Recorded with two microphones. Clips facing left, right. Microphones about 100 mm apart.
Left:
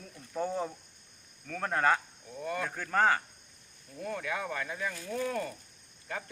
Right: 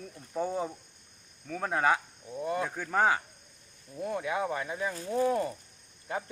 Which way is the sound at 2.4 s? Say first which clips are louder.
Right 3 dB; 20° right (ahead or behind).